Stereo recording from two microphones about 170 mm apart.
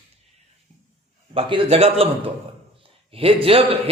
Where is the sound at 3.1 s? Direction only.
35° right (ahead or behind).